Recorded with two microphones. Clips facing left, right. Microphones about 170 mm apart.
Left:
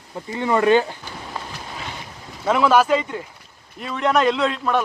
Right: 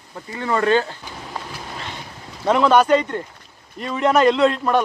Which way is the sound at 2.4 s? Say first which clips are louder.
Right 2 dB; 5° left (ahead or behind).